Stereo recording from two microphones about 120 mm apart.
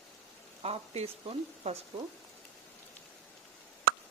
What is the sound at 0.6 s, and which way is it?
Stir, 60° right (ahead or behind).